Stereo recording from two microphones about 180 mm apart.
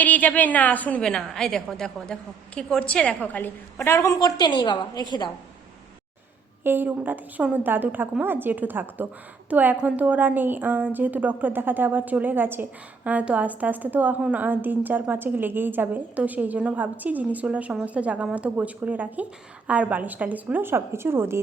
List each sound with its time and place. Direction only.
0.0 s a woman's voice: 10° left (ahead or behind)
6.7 s a woman's voice: 10° right (ahead or behind)